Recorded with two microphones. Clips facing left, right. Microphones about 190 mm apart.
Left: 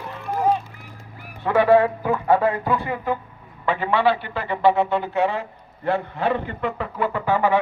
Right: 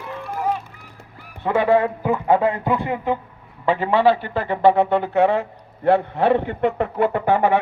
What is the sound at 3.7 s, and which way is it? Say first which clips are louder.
A man's voice: right 3 dB; 35° right (ahead or behind).